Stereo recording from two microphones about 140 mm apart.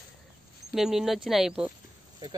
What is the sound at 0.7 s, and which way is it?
Speech, centre (ahead or behind).